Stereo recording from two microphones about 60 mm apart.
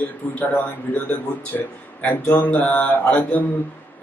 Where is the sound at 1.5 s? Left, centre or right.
Left.